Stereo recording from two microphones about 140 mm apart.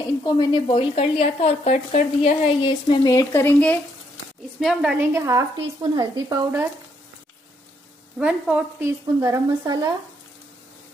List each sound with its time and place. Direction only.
0.2 s speech: 30° left (ahead or behind)
0.7 s a woman's voice: 40° left (ahead or behind)
2.6 s speech: 30° left (ahead or behind); by 3.8 s 15° left (ahead or behind)
4.6 s a woman's voice: centre (ahead or behind)
4.9 s a woman's voice: 20° right (ahead or behind)
8.2 s a woman's voice: 10° right (ahead or behind)
8.8 s a woman's voice: 20° right (ahead or behind)